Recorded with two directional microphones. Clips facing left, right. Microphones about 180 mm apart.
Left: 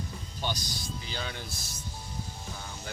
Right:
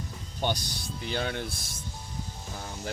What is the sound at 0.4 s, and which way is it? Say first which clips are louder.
Speech: right 4 dB; 55° right (ahead or behind).